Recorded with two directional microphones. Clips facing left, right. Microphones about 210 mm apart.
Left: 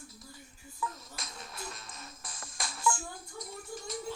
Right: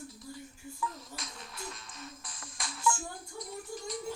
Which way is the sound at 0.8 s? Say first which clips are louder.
Even; 45° left (ahead or behind).